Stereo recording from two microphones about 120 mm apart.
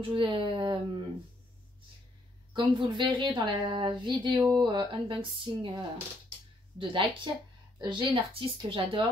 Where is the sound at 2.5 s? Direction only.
45° right (ahead or behind).